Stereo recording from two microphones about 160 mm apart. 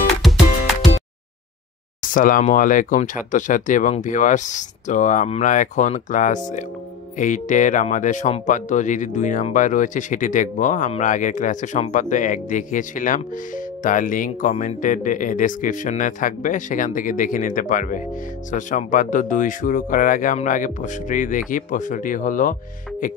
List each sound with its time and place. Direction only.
0.2 s music: centre (ahead or behind)
2.0 s speech: 55° left (ahead or behind)